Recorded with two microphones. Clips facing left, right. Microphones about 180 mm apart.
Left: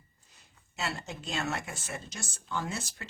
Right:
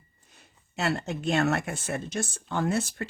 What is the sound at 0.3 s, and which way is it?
Speech, 60° right (ahead or behind).